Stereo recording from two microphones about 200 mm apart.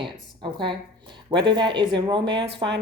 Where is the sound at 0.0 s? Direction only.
25° right (ahead or behind).